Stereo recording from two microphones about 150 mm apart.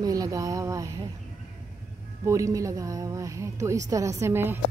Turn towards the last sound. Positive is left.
turn(degrees=-15)  # may be behind; listen again after turning